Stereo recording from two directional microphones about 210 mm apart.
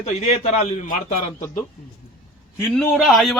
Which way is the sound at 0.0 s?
30° left (ahead or behind).